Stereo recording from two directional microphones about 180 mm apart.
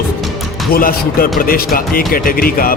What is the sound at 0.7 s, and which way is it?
Speech, 50° left (ahead or behind).